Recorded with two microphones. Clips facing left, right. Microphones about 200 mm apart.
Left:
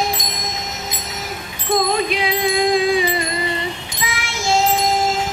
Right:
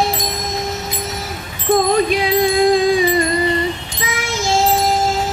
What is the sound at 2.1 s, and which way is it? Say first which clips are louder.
Music: right 4 dB; 45° right (ahead or behind).